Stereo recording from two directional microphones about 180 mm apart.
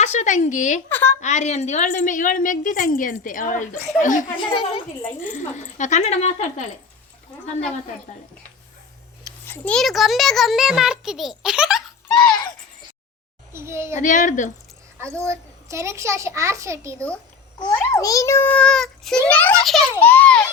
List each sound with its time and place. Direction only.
0.0 s a woman's voice: 40° left (ahead or behind)
0.9 s a child's voice: 10° left (ahead or behind)
1.2 s a woman's voice: 40° left (ahead or behind)
4.4 s a woman's voice: 25° left (ahead or behind)
5.2 s speech: 45° left (ahead or behind)
9.5 s a child's voice: 5° left (ahead or behind)
13.5 s a child's voice: 15° right (ahead or behind)
14.0 s a woman's voice: 45° left (ahead or behind)
15.2 s a child's voice: 15° right (ahead or behind)
17.7 s a child's voice: 20° left (ahead or behind)